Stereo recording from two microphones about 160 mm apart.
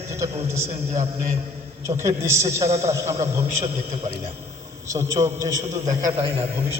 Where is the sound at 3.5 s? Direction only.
45° right (ahead or behind).